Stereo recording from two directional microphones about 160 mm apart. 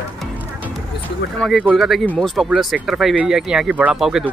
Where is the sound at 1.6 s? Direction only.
5° right (ahead or behind).